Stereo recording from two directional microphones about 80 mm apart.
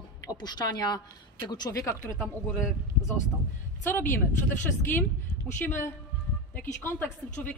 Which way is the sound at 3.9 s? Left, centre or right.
Left.